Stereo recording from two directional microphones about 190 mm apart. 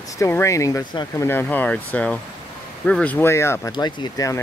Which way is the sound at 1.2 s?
10° left (ahead or behind).